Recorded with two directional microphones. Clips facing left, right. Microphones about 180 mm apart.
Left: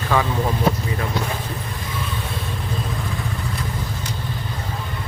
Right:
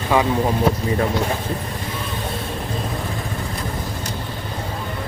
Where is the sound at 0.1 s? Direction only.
20° right (ahead or behind).